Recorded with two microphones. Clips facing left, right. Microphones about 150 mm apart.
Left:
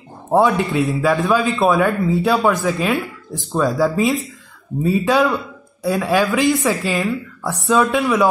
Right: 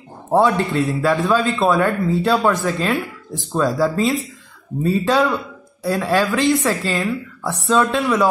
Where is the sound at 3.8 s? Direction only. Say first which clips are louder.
Left 1 dB; centre (ahead or behind).